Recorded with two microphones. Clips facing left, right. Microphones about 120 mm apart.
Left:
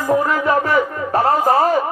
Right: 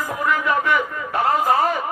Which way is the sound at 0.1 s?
35° left (ahead or behind).